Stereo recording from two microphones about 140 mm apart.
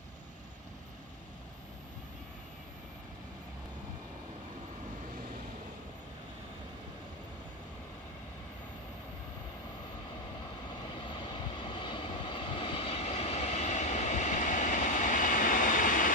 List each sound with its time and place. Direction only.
11.0 s vehicle: 35° left (ahead or behind); by 16.1 s 75° left (ahead or behind)